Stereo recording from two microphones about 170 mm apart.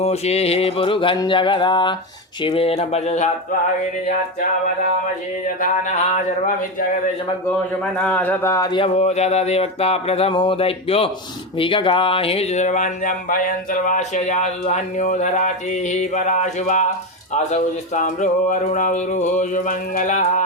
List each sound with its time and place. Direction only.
0.0 s mantra: 40° left (ahead or behind)
2.4 s speech: 35° left (ahead or behind)
7.9 s speech: 5° left (ahead or behind); by 8.9 s 25° left (ahead or behind)
9.0 s speech: 40° left (ahead or behind)